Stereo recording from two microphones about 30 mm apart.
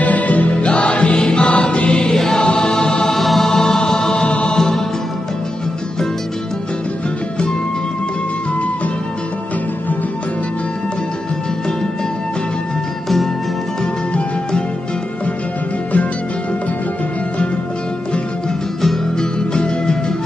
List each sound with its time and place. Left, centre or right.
0.0 s music: left
0.7 s music: left
2.0 s music: centre
2.3 s choir: left
3.1 s music: centre
4.3 s music: left
19.1 s music: left